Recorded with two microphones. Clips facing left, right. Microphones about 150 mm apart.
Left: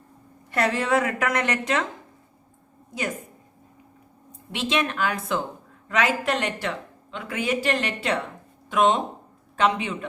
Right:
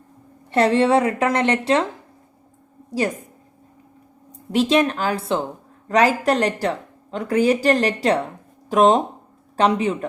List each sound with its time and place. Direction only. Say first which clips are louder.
0.5 s a woman's voice: right 7 dB; 30° right (ahead or behind)
4.3 s a woman's voice: right 9 dB; 40° right (ahead or behind)